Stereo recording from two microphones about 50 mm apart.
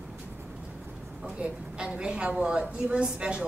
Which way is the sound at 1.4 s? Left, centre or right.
Right.